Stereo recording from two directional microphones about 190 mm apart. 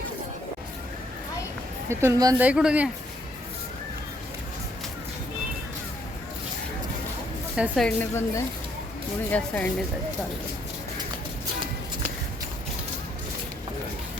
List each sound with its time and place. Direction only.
1.9 s speech: 15° right (ahead or behind)
2.4 s speech: 5° right (ahead or behind)
7.5 s a woman's voice: 5° right (ahead or behind)
7.9 s a woman's voice: 15° left (ahead or behind)